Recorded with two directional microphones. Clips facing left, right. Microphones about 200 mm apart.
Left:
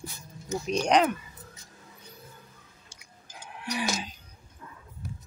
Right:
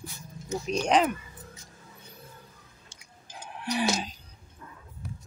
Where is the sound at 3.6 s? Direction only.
30° right (ahead or behind).